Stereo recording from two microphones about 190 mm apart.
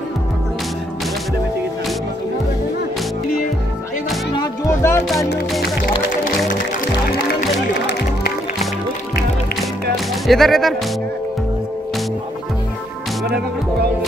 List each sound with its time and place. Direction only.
4.4 s music: 15° left (ahead or behind)
7.7 s music: 65° left (ahead or behind)
9.9 s music: centre (ahead or behind)